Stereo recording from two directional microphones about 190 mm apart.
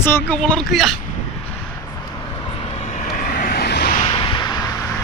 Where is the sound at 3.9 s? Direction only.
25° left (ahead or behind).